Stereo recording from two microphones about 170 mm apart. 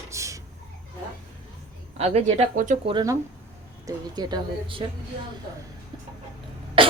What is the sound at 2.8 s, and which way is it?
A woman's voice, 25° right (ahead or behind).